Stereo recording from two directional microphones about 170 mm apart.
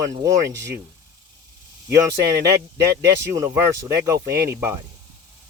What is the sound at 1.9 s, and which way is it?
Speech, 20° right (ahead or behind).